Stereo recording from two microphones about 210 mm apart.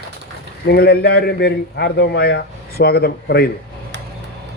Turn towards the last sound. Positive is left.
turn(degrees=50)  # may be behind; listen again after turning